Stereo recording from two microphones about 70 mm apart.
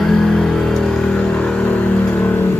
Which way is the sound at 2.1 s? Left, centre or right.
Left.